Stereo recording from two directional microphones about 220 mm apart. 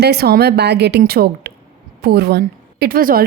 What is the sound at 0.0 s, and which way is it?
A woman's voice, 45° right (ahead or behind).